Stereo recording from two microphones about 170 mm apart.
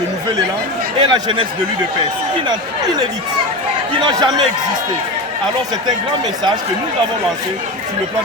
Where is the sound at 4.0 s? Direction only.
25° right (ahead or behind).